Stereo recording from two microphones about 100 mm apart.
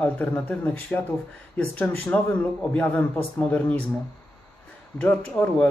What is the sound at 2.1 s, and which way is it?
Speech, 15° left (ahead or behind).